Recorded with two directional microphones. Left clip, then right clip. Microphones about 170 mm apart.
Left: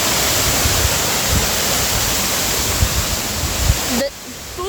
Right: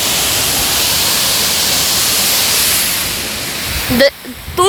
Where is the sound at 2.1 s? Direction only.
70° left (ahead or behind).